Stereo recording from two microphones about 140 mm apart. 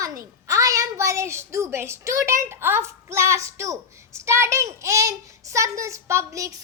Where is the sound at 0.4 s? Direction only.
25° right (ahead or behind).